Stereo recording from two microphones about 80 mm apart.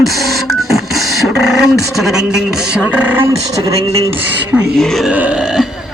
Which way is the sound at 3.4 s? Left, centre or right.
Right.